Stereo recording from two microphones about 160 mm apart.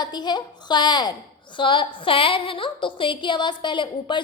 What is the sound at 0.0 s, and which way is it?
A woman's voice, 25° left (ahead or behind).